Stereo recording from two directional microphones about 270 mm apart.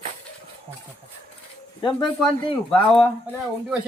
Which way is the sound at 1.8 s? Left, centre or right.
Centre.